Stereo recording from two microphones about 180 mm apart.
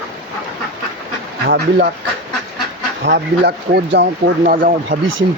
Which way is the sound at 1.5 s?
60° right (ahead or behind).